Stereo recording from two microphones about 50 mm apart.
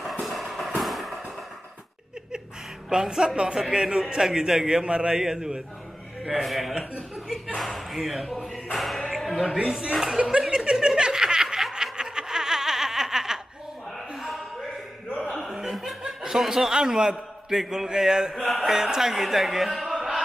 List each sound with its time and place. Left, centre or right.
0.0 s music: centre
2.9 s a man's voice: centre
7.5 s speech: centre
9.6 s a man's voice: centre
9.9 s speech: centre
10.5 s chuckle: centre
11.0 s snicker: centre
15.7 s speech: centre
19.9 s music: centre